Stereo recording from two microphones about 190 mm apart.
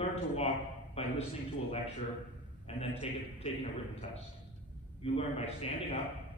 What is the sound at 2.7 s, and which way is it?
A man's voice, 30° left (ahead or behind).